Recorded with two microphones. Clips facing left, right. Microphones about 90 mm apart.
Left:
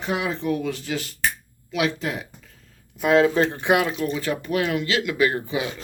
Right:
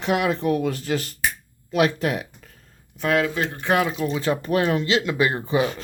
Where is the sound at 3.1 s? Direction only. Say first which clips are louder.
Left 5 dB; 30° left (ahead or behind).